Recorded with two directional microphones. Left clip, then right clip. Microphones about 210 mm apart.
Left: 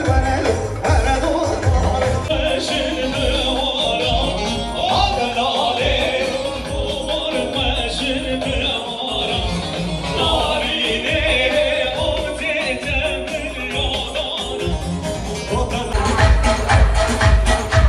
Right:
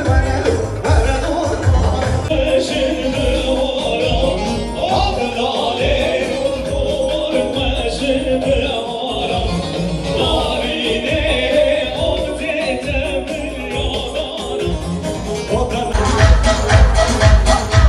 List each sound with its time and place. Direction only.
10.1 s music: 20° left (ahead or behind)